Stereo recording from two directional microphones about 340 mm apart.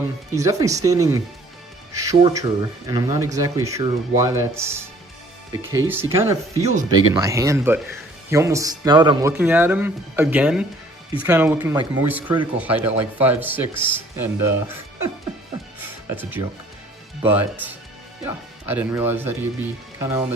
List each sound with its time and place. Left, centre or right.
0.3 s speech: centre
5.9 s speech: centre
6.7 s speech: centre
7.2 s speech: centre
16.0 s speech: centre